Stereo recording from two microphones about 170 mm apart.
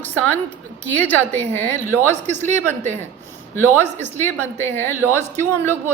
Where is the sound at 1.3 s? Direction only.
40° right (ahead or behind).